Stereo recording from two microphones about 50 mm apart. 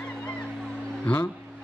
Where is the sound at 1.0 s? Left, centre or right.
Left.